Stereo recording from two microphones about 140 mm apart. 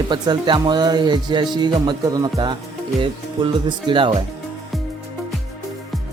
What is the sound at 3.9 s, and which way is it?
Speech, 35° right (ahead or behind).